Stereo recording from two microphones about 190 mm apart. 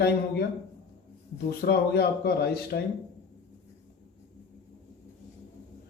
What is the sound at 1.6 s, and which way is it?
Speech, 55° left (ahead or behind).